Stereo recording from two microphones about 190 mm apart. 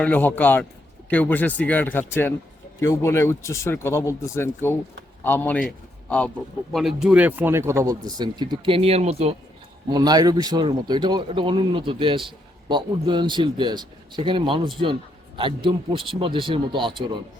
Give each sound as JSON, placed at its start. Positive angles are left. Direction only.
{"t": 0.0, "sound": "a man's voice", "side_deg": 10}
{"t": 9.9, "sound": "speech", "side_deg": -20}